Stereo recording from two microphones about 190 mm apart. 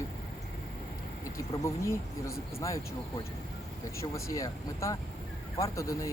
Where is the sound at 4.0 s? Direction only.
15° left (ahead or behind).